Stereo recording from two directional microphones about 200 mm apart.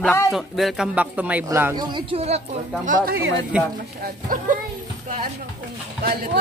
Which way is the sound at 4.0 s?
45° right (ahead or behind).